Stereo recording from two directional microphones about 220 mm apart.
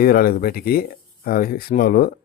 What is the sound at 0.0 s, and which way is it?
Speech, 40° left (ahead or behind).